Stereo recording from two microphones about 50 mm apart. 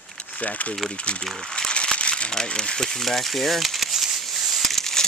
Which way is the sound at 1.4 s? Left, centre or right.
Centre.